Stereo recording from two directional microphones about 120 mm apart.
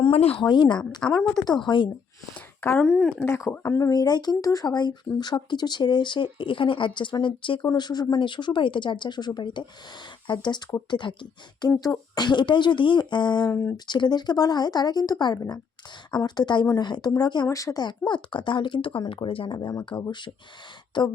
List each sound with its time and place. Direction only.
0.0 s speech: 55° left (ahead or behind)
0.4 s speech: 40° left (ahead or behind)
1.0 s speech: 5° left (ahead or behind)
1.6 s speech: 40° left (ahead or behind)
2.3 s speech: 10° left (ahead or behind)
3.2 s speech: 15° left (ahead or behind); by 13.5 s 35° left (ahead or behind)
13.5 s speech: 20° left (ahead or behind)
13.7 s speech: 40° left (ahead or behind)
19.5 s speech: 30° left (ahead or behind)